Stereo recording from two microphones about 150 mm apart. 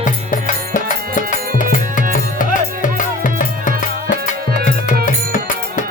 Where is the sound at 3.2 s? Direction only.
60° left (ahead or behind).